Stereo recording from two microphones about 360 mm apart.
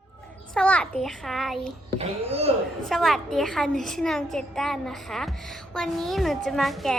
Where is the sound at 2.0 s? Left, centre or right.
Centre.